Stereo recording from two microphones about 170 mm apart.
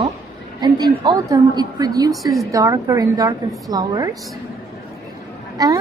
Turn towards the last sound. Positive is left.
turn(degrees=-20)  # may be behind; listen again after turning